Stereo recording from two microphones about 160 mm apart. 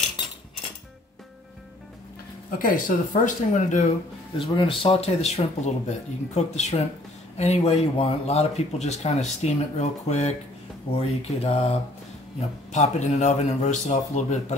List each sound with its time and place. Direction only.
2.6 s speech: 55° left (ahead or behind)
4.4 s speech: 35° left (ahead or behind)